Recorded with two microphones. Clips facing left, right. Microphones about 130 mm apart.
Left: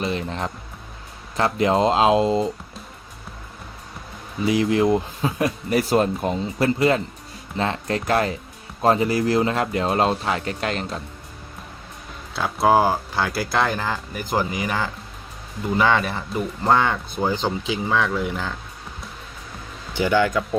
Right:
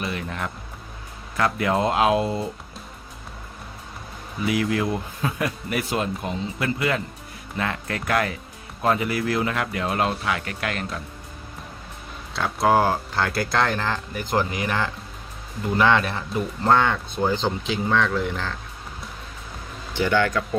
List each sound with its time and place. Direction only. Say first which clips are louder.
0.0 s music: left 4 dB; 25° left (ahead or behind)
1.4 s speech: left 3 dB; 25° left (ahead or behind)
4.4 s speech: left 5 dB; 25° left (ahead or behind)
5.7 s speech: left 8 dB; 35° left (ahead or behind)
12.3 s speech: left 2 dB; 5° left (ahead or behind)
20.0 s speech: left 2 dB; 10° left (ahead or behind)